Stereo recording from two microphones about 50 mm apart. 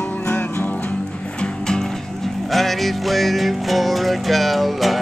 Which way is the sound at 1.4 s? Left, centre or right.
Centre.